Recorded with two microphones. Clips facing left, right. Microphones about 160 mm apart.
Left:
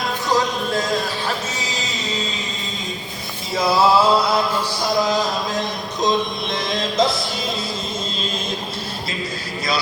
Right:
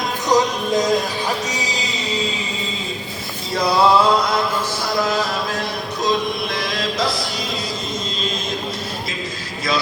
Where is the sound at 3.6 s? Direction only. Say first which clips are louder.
Right 1 dB; 5° left (ahead or behind).